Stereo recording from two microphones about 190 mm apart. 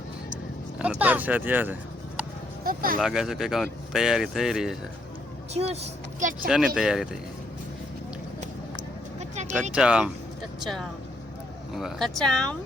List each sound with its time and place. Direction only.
0.8 s speech: 5° right (ahead or behind)
2.6 s speech: 50° right (ahead or behind)
3.0 s speech: centre (ahead or behind)
5.5 s speech: 35° right (ahead or behind)
6.5 s speech: 5° right (ahead or behind)
9.3 s a sound: 35° right (ahead or behind)
9.7 s speech: 5° right (ahead or behind)